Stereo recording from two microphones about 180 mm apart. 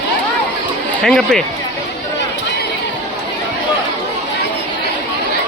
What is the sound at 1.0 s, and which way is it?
Speech, centre (ahead or behind).